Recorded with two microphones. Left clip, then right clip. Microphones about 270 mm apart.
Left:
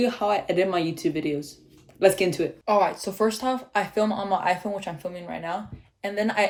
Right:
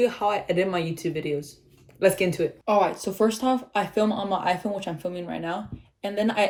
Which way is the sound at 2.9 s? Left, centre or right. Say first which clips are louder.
Right 1 dB; left.